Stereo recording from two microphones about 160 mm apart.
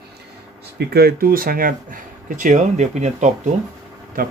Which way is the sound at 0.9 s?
70° right (ahead or behind).